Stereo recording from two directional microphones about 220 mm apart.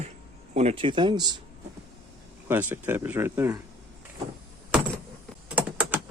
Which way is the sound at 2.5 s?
10° right (ahead or behind).